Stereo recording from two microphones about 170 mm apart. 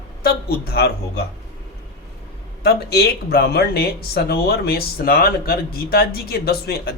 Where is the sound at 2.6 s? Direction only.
70° left (ahead or behind).